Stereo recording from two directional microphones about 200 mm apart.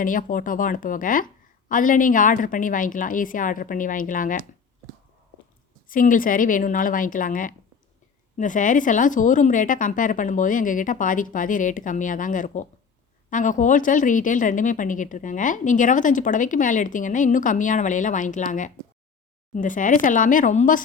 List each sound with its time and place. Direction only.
0.0 s speech: 40° left (ahead or behind)
5.9 s speech: 45° left (ahead or behind)